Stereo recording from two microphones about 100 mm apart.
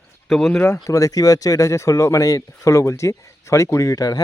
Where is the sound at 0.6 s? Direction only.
30° left (ahead or behind).